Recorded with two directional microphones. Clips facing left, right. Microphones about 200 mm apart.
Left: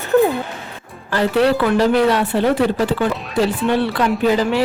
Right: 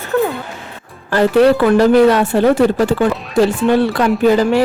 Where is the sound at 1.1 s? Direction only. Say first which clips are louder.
Right 5 dB; 50° right (ahead or behind).